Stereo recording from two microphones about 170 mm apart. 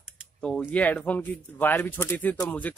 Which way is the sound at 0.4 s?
10° left (ahead or behind).